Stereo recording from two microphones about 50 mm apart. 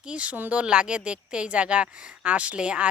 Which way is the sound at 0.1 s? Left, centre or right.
Right.